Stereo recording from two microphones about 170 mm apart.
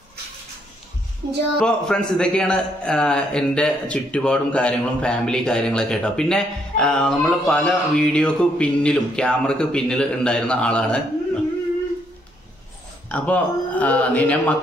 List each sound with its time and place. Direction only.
1.2 s speech: 90° right
1.6 s a man's voice: 5° left (ahead or behind)
13.1 s speech: 10° left (ahead or behind)